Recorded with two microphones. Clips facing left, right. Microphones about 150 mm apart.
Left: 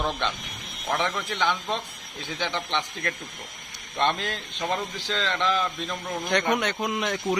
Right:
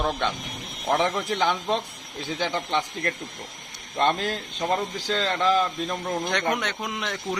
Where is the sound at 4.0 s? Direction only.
40° right (ahead or behind).